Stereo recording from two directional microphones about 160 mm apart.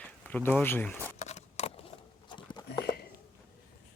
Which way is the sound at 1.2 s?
45° left (ahead or behind).